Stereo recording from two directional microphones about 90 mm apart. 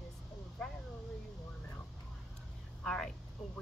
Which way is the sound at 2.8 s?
10° left (ahead or behind).